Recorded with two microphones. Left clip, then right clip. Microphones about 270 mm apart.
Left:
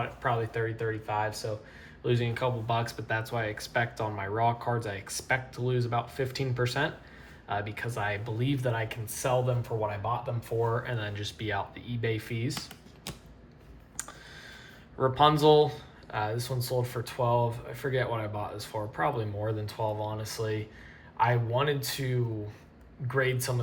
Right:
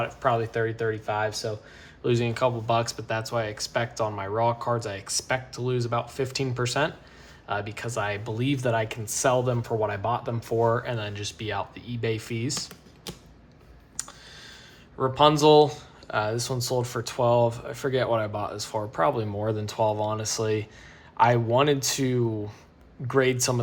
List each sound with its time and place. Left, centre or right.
0.0 s speech: centre
14.0 s clicking: centre
14.9 s speech: centre